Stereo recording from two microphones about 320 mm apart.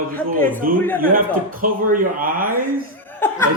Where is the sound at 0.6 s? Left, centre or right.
Right.